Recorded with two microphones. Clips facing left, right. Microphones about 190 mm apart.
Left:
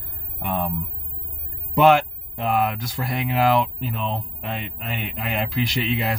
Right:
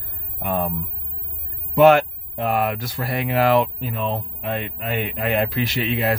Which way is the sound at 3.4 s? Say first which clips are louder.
Right 2 dB; 55° right (ahead or behind).